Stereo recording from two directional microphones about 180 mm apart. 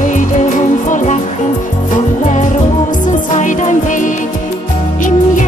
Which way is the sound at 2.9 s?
45° left (ahead or behind).